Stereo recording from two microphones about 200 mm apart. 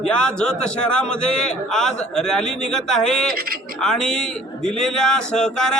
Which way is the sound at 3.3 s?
50° right (ahead or behind).